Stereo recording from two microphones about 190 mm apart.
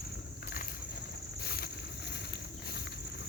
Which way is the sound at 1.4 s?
55° left (ahead or behind).